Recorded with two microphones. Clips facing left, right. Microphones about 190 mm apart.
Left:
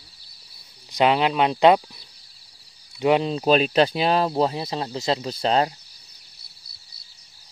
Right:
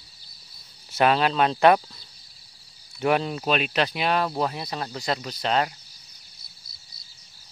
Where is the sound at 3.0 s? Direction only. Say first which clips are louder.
Left 3 dB; 20° left (ahead or behind).